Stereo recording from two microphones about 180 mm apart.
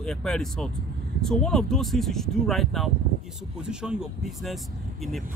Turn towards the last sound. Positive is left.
turn(degrees=-5)  # may be behind; listen again after turning